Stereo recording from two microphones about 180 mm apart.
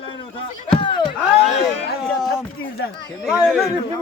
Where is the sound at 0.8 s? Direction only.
25° left (ahead or behind).